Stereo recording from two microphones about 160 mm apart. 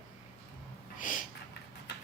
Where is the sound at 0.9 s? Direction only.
55° left (ahead or behind).